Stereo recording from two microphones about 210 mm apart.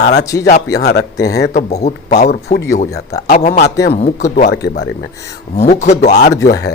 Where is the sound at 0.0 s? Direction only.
50° left (ahead or behind).